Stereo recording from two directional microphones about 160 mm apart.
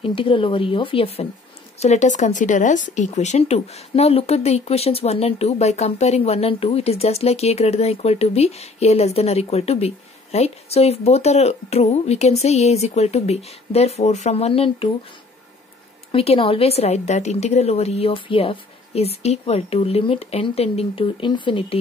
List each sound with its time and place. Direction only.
0.0 s speech: 35° left (ahead or behind)
1.8 s speech: 45° left (ahead or behind)
16.1 s speech: 35° left (ahead or behind)